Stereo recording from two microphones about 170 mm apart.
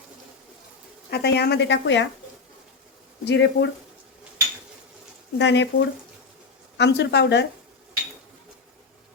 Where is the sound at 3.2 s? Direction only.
90° left.